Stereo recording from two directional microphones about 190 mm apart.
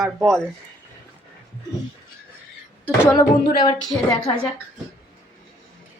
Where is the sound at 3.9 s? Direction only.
25° left (ahead or behind).